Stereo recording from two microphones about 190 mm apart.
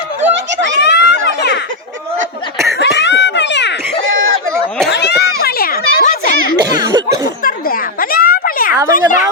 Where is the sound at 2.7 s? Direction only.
65° left (ahead or behind).